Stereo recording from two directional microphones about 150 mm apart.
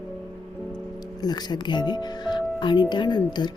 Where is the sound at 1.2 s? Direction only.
25° left (ahead or behind).